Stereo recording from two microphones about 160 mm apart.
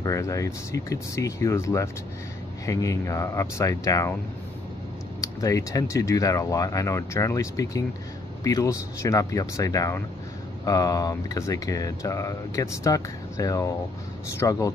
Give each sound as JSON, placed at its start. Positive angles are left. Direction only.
{"t": 0.0, "sound": "speech", "side_deg": 20}
{"t": 5.2, "sound": "speech", "side_deg": 20}